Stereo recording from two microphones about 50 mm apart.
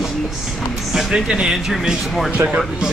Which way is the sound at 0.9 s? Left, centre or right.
Centre.